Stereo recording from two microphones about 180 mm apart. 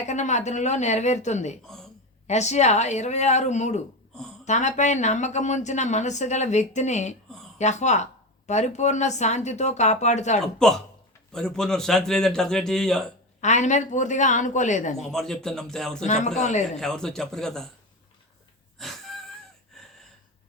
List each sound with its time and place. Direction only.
0.0 s speech: 40° left (ahead or behind)
1.6 s speech: 5° left (ahead or behind)
2.2 s speech: 40° left (ahead or behind)
11.3 s a man's voice: 5° left (ahead or behind)
13.4 s speech: 40° left (ahead or behind)
14.9 s a man's voice: centre (ahead or behind)
16.0 s speech: 40° left (ahead or behind)
16.7 s a man's voice: 5° left (ahead or behind)
18.8 s wheeze: centre (ahead or behind)
19.7 s gasp: centre (ahead or behind)